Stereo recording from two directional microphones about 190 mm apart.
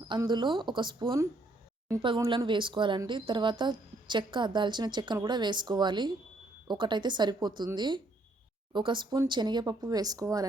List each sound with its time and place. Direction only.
0.1 s speech: 25° right (ahead or behind)